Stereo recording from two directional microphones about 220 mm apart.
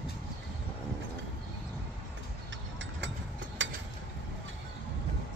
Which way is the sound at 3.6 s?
60° right (ahead or behind).